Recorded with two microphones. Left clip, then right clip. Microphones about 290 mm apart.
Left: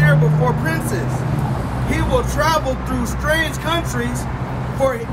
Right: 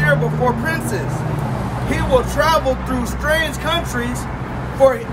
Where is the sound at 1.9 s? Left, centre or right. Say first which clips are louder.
Right 3 dB; centre.